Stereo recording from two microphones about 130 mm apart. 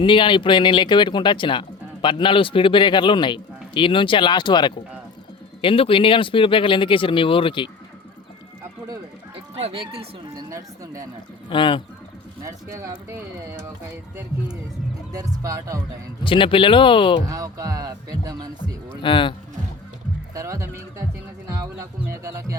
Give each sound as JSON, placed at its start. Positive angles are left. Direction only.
{"t": 0.0, "sound": "speech", "side_deg": 40}
{"t": 9.3, "sound": "speech", "side_deg": -50}
{"t": 10.3, "sound": "speech", "side_deg": -25}
{"t": 11.4, "sound": "speech", "side_deg": 40}
{"t": 12.4, "sound": "speech", "side_deg": -25}
{"t": 15.1, "sound": "speech", "side_deg": -25}
{"t": 16.2, "sound": "speech", "side_deg": 40}
{"t": 17.2, "sound": "speech", "side_deg": -25}
{"t": 19.0, "sound": "speech", "side_deg": 40}
{"t": 20.3, "sound": "speech", "side_deg": -25}